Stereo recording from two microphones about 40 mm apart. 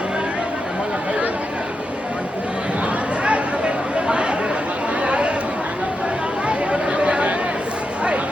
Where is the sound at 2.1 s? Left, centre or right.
Right.